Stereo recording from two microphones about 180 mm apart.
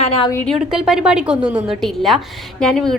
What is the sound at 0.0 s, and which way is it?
Speech, 30° left (ahead or behind).